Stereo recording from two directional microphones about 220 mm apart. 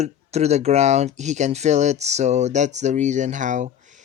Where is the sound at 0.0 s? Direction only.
30° right (ahead or behind).